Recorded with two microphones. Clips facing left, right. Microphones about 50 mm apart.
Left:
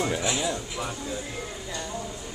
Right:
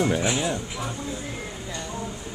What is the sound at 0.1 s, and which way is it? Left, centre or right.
Speech, right.